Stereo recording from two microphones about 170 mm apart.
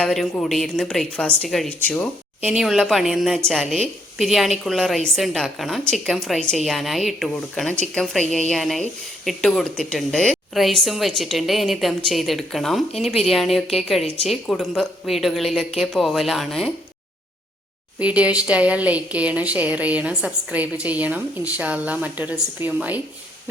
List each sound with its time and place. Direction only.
0.0 s a woman's voice: 5° left (ahead or behind)
18.0 s a woman's voice: 10° right (ahead or behind)